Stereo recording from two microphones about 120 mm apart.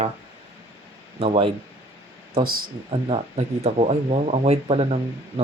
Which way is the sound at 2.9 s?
50° right (ahead or behind).